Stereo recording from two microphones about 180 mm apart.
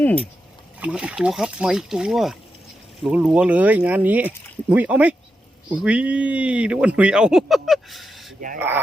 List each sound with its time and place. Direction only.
0.0 s speech: 10° left (ahead or behind)
0.8 s speech: 5° right (ahead or behind)